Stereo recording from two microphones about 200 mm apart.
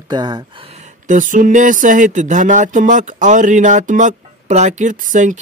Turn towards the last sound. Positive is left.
turn(degrees=-40)  # may be behind; listen again after turning